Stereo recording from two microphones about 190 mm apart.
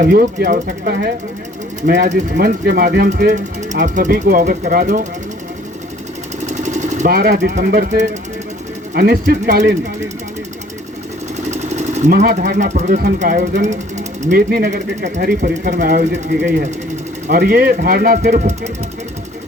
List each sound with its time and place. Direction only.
0.0 s speech: 50° right (ahead or behind)
2.3 s speech: 55° right (ahead or behind)
4.1 s speech: 50° right (ahead or behind)
6.4 s vehicle: 40° right (ahead or behind)
7.1 s speech: 55° right (ahead or behind)
9.0 s speech: 55° right (ahead or behind)
11.3 s speech: 35° right (ahead or behind)